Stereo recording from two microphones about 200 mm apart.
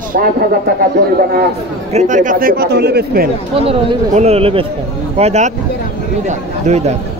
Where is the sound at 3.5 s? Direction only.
30° right (ahead or behind).